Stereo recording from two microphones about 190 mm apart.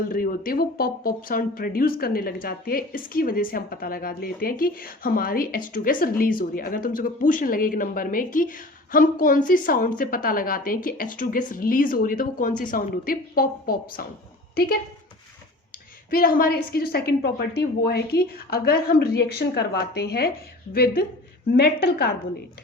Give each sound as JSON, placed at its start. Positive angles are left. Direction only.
{"t": 0.1, "sound": "speech", "side_deg": 50}
{"t": 16.0, "sound": "a woman's voice", "side_deg": 50}